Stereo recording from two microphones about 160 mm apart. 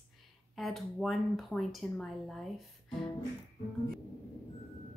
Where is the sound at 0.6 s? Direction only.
Centre (ahead or behind).